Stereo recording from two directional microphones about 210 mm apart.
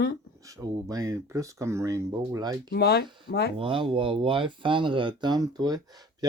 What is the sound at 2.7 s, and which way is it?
Speech, 50° left (ahead or behind).